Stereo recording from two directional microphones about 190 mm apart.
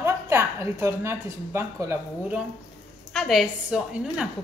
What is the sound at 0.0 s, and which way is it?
Speech, 15° right (ahead or behind).